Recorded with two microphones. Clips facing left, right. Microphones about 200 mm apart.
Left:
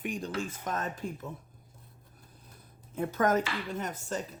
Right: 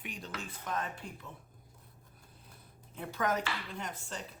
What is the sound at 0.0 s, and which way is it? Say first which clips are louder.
Speech: left 9 dB; 45° left (ahead or behind).